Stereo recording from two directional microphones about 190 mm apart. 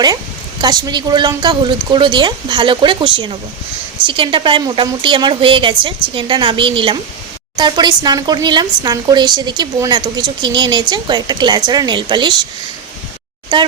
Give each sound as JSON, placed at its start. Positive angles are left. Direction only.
{"t": 0.6, "sound": "a woman's voice", "side_deg": -20}
{"t": 13.5, "sound": "a woman's voice", "side_deg": -25}